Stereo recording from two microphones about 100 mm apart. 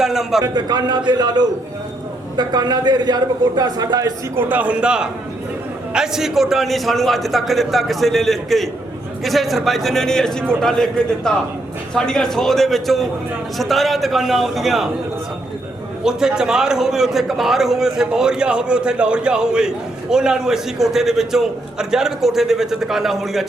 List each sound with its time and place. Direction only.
0.0 s a man's voice: 5° right (ahead or behind)
0.4 s a man's voice: 45° right (ahead or behind)
4.4 s a man's voice: 15° right (ahead or behind); by 14.8 s centre (ahead or behind)
16.0 s a man's voice: 5° right (ahead or behind)